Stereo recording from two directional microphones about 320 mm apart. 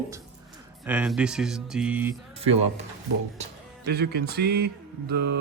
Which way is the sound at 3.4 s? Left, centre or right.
Right.